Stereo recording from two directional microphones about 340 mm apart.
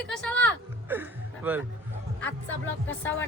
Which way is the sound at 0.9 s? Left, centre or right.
Centre.